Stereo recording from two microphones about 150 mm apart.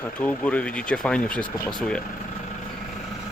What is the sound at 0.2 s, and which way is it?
Speech, 10° left (ahead or behind).